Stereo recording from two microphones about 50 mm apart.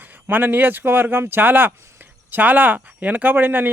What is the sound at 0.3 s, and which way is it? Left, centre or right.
Speech, right.